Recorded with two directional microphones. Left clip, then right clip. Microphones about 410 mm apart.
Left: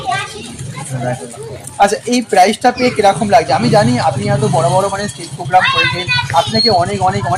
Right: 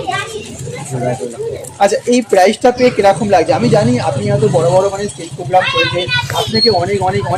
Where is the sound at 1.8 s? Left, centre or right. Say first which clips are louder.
Right 3 dB; left.